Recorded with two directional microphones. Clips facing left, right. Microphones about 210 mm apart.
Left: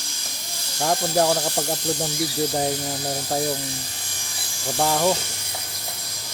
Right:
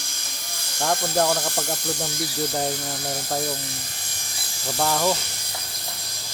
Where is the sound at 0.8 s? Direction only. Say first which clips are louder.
Left 2 dB; 15° left (ahead or behind).